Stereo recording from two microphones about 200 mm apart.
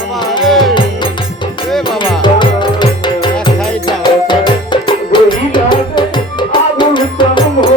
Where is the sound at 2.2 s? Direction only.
25° left (ahead or behind).